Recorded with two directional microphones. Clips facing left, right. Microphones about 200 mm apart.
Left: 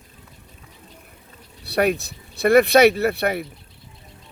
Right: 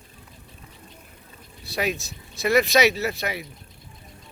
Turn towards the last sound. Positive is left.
turn(degrees=60)  # may be behind; listen again after turning